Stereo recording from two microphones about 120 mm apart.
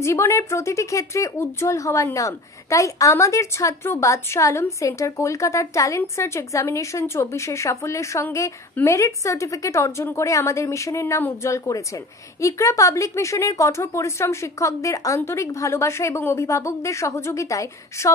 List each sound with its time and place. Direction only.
0.0 s a woman's voice: 20° left (ahead or behind)